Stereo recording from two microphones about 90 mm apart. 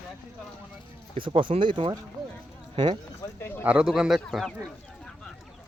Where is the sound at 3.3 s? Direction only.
25° left (ahead or behind).